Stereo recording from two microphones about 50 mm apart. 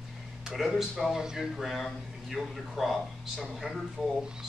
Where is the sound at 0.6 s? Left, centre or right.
Centre.